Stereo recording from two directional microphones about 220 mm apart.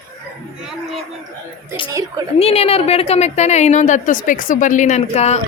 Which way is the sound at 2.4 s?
25° left (ahead or behind).